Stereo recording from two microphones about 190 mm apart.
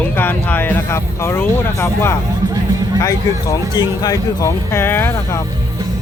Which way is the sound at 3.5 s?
20° left (ahead or behind).